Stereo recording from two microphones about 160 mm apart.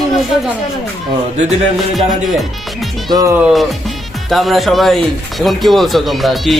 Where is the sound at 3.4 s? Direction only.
5° right (ahead or behind).